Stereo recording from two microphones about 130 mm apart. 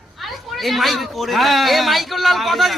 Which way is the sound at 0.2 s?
Centre (ahead or behind).